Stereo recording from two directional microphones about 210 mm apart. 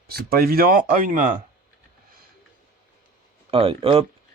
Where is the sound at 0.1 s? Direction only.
45° right (ahead or behind).